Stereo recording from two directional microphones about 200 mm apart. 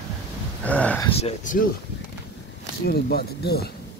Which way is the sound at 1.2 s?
30° left (ahead or behind).